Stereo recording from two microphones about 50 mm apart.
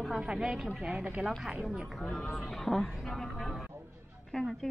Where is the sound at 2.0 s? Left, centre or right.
Centre.